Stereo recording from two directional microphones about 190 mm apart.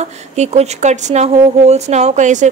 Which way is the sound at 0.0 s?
35° right (ahead or behind).